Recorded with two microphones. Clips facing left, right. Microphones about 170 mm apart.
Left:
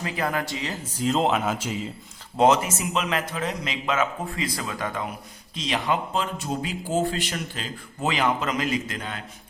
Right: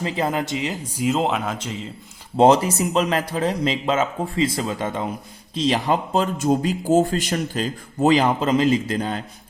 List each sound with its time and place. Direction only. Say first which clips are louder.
0.0 s speech: right 4 dB; 25° right (ahead or behind); by 1.9 s 5° left (ahead or behind)
2.3 s speech: right 5 dB; 30° right (ahead or behind)